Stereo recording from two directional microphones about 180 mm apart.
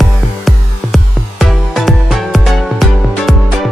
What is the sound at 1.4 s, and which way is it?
Music, centre (ahead or behind).